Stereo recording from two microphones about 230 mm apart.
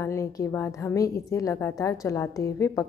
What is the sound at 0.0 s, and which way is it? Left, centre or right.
A woman's voice, centre.